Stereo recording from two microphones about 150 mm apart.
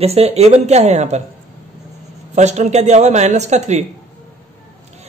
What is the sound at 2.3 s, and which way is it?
Speech, 50° right (ahead or behind).